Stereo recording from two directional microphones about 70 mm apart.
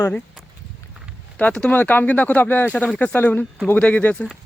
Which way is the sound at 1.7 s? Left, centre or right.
Left.